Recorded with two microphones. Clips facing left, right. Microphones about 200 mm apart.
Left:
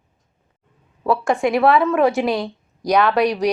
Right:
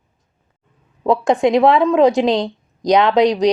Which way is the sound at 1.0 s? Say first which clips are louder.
Right 4 dB; 20° right (ahead or behind).